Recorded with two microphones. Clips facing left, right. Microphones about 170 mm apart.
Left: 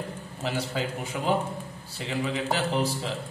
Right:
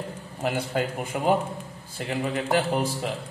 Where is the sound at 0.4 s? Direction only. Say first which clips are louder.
Right 4 dB; 55° right (ahead or behind).